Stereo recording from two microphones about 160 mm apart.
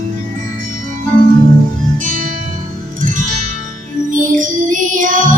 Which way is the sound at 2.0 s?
55° right (ahead or behind).